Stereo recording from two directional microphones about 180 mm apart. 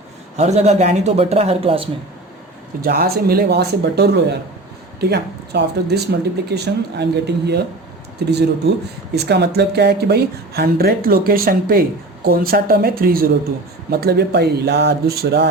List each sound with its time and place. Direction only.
0.3 s speech: 40° right (ahead or behind)
2.8 s speech: 60° right (ahead or behind)
9.1 s speech: 65° right (ahead or behind)